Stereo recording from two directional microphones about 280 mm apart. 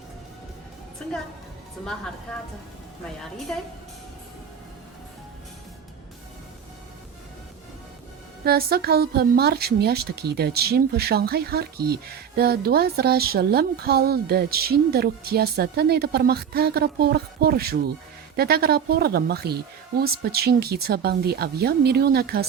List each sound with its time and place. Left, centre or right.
8.4 s speech: right